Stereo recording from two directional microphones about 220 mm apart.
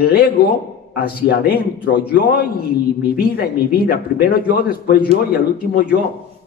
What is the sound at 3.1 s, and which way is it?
Speech, 45° left (ahead or behind).